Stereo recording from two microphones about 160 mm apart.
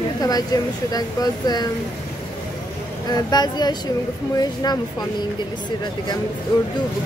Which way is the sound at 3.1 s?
25° left (ahead or behind).